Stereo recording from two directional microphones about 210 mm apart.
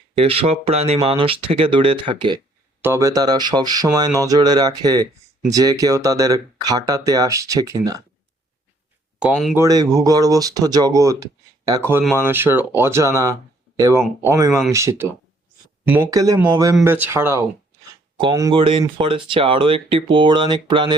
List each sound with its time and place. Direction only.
0.2 s speech: 25° right (ahead or behind)
9.1 s speech: centre (ahead or behind)
9.6 s speech: 15° right (ahead or behind)